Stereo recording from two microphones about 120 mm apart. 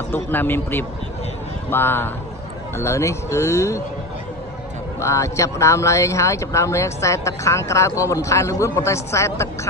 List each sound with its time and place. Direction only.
0.1 s a man's voice: 15° left (ahead or behind)
5.0 s speech: 25° left (ahead or behind)